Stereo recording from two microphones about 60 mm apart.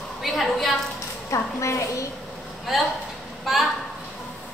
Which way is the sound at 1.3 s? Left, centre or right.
Left.